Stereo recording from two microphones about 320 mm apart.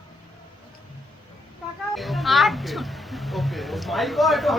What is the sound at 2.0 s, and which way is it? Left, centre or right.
Music, centre.